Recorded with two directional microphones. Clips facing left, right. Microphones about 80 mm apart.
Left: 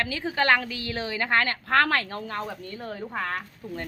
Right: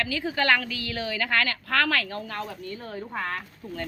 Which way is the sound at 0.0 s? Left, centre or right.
Left.